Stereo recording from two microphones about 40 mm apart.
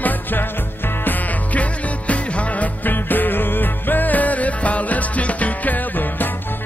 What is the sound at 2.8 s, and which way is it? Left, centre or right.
Music, left.